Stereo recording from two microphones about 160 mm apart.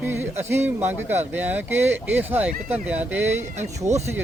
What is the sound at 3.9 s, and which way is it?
Speech, 50° right (ahead or behind).